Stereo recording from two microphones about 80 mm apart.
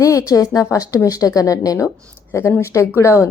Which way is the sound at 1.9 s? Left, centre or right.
Left.